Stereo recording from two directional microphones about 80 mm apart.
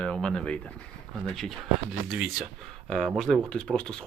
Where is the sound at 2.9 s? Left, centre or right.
Centre.